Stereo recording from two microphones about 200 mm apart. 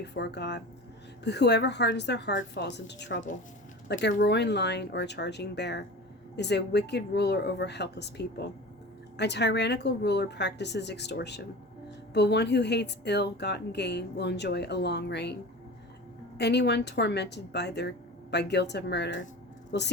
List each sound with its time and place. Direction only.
0.0 s speech: 60° left (ahead or behind)
16.4 s speech: 55° left (ahead or behind)